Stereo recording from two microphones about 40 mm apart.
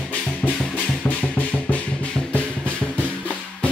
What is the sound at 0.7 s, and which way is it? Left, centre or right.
Music, left.